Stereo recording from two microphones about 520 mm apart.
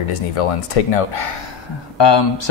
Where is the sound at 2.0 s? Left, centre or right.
Left.